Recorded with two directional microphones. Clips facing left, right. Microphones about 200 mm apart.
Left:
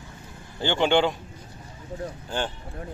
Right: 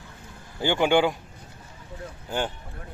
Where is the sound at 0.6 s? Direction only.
10° right (ahead or behind).